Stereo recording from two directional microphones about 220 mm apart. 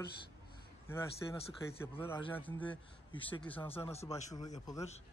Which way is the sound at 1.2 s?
15° left (ahead or behind).